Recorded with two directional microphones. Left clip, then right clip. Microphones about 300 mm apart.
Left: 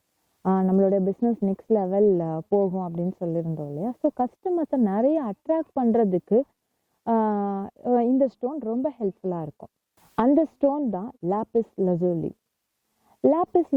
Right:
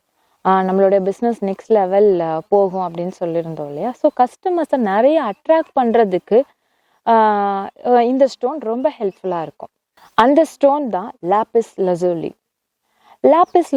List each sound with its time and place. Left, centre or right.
0.4 s a woman's voice: centre
2.8 s a woman's voice: centre